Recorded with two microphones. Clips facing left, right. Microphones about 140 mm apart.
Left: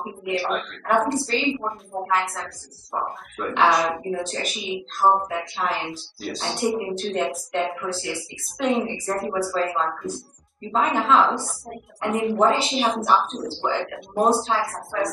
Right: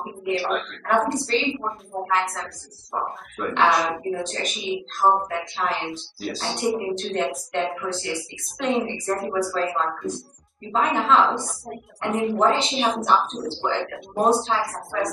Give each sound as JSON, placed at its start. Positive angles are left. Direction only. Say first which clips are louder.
{"t": 0.0, "sound": "a woman's voice", "louder": "right 1 dB", "side_deg": 0}